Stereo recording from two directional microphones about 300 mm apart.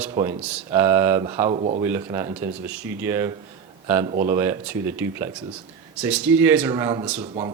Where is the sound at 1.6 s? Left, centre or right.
Right.